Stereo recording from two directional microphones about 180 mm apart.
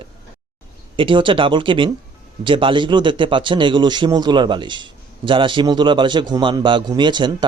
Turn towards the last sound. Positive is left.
turn(degrees=-25)  # may be behind; listen again after turning